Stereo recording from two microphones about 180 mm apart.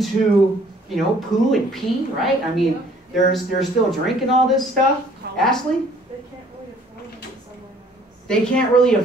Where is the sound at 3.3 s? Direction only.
Centre (ahead or behind).